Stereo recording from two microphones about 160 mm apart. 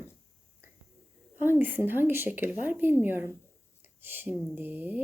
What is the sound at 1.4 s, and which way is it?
Speech, 10° right (ahead or behind).